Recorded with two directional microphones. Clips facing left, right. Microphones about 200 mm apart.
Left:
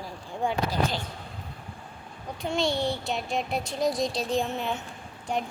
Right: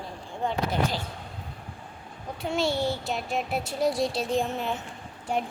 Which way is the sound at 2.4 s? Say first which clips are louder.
Even; 5° right (ahead or behind).